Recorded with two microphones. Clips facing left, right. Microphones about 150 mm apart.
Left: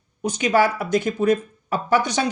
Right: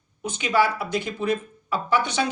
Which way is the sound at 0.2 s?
40° left (ahead or behind).